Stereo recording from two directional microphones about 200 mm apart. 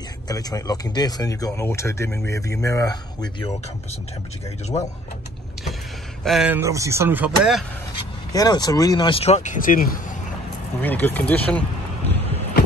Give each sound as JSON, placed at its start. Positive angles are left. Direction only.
{"t": 0.3, "sound": "speech", "side_deg": 20}
{"t": 6.2, "sound": "speech", "side_deg": -5}
{"t": 8.3, "sound": "speech", "side_deg": 20}
{"t": 10.8, "sound": "speech", "side_deg": 10}